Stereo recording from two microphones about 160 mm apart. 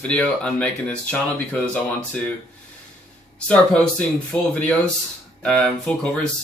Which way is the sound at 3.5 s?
5° left (ahead or behind).